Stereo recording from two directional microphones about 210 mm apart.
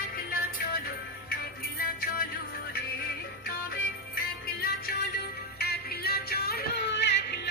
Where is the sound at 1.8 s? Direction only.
45° left (ahead or behind).